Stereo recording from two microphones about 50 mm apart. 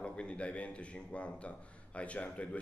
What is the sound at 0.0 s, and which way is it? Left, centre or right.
Speech, left.